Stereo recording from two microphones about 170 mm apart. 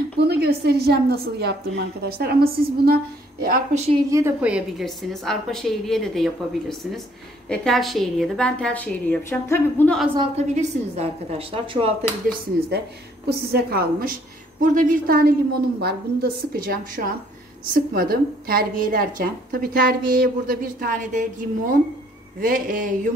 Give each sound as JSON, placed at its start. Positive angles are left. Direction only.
{"t": 0.3, "sound": "a woman's voice", "side_deg": -70}
{"t": 3.7, "sound": "a woman's voice", "side_deg": -40}
{"t": 4.1, "sound": "a woman's voice", "side_deg": -10}
{"t": 10.1, "sound": "a woman's voice", "side_deg": -35}
{"t": 12.3, "sound": "a woman's voice", "side_deg": -70}
{"t": 14.6, "sound": "a woman's voice", "side_deg": -50}
{"t": 22.4, "sound": "a sound", "side_deg": -55}